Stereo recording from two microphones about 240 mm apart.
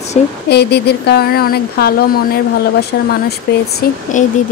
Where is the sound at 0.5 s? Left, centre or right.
Left.